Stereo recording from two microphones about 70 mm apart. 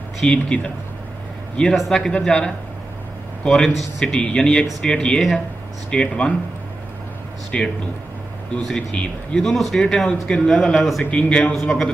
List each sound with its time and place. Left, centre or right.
0.2 s speech: centre
1.9 s speech: centre
7.5 s speech: centre
11.1 s speech: centre